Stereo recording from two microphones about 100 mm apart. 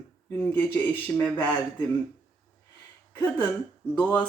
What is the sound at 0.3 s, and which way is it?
Speech, 20° left (ahead or behind).